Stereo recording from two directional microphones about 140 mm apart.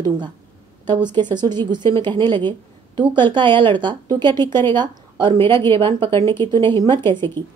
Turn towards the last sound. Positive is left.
turn(degrees=-35)  # may be behind; listen again after turning